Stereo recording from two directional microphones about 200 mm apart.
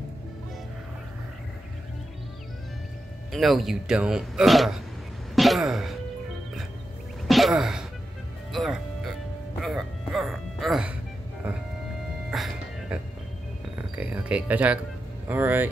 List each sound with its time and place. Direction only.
3.3 s speech: centre (ahead or behind)
5.3 s throat clearing: centre (ahead or behind)
7.2 s a sound: centre (ahead or behind)
8.5 s music: centre (ahead or behind)
13.7 s music: 5° right (ahead or behind)
15.2 s speech: 10° right (ahead or behind)